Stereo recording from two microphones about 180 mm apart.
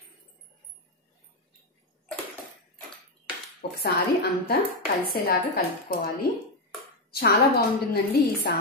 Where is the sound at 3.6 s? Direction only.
60° left (ahead or behind).